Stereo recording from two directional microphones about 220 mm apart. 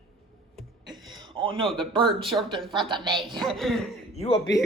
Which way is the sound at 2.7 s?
20° right (ahead or behind).